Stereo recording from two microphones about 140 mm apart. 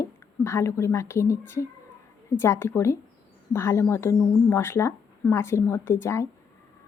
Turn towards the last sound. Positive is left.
turn(degrees=20)  # may be behind; listen again after turning